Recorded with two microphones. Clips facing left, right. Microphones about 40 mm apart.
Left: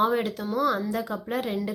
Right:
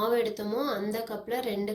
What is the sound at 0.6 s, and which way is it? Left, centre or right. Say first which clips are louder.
Speech: left 7 dB; left.